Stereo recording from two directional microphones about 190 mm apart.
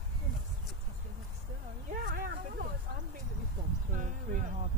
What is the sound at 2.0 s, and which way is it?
Speech, 50° right (ahead or behind).